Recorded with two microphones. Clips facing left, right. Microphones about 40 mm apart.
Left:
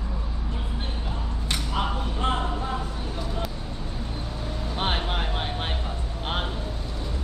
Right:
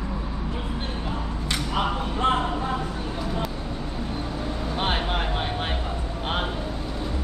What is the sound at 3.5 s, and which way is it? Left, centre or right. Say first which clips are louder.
Vehicle: right 4 dB; right.